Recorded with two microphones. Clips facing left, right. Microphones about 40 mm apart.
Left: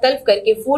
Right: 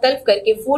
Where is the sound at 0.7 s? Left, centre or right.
Left.